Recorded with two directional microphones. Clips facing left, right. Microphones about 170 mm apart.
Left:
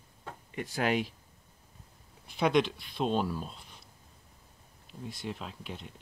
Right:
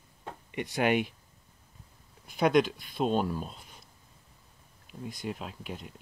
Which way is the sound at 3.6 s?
45° right (ahead or behind).